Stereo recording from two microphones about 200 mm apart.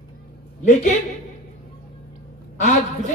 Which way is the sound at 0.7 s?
35° left (ahead or behind).